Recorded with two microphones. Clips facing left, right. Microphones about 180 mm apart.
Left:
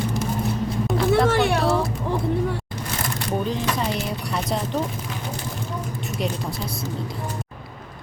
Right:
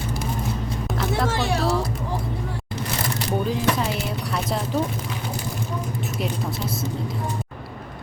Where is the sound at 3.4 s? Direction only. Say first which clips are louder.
Right 3 dB; 5° right (ahead or behind).